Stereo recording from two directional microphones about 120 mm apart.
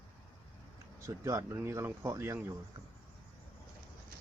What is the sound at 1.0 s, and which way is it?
Speech, 25° right (ahead or behind).